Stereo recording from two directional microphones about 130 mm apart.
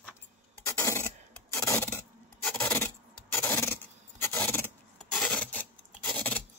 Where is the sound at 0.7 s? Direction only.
25° left (ahead or behind).